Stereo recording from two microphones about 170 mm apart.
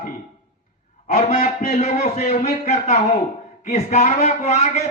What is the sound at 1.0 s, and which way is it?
A man's voice, 40° left (ahead or behind).